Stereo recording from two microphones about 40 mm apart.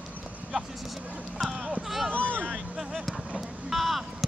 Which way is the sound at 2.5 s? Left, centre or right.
Centre.